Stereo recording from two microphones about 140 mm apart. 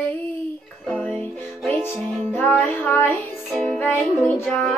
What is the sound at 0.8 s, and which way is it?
Music, 10° left (ahead or behind).